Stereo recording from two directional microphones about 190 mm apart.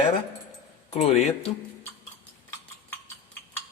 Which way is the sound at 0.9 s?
35° left (ahead or behind).